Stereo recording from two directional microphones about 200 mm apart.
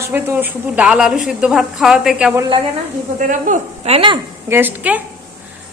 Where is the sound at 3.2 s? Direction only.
40° right (ahead or behind).